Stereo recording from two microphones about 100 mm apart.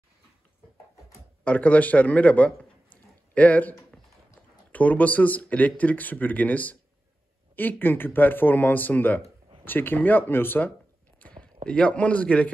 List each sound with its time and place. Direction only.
1.4 s speech: 15° left (ahead or behind)
4.7 s a man's voice: 15° left (ahead or behind)